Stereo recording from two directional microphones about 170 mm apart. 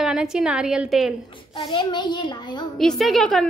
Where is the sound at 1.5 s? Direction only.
25° left (ahead or behind).